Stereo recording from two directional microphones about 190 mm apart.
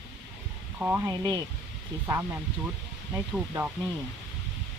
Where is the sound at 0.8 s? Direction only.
10° right (ahead or behind).